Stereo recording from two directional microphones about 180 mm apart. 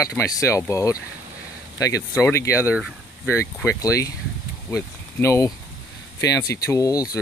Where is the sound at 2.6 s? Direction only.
5° right (ahead or behind).